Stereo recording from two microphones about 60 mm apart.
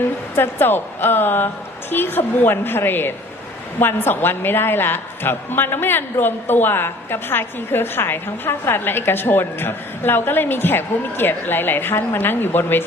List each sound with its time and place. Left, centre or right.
0.0 s a woman's voice: left